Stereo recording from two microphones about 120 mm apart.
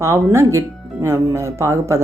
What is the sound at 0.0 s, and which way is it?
Speech, 25° right (ahead or behind).